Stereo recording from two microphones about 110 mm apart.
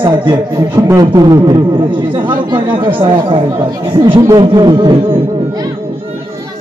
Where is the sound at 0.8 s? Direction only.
30° right (ahead or behind).